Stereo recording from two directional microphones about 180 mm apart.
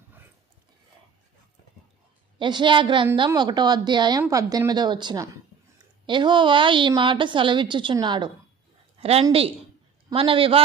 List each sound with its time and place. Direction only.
2.4 s a woman's voice: 25° right (ahead or behind)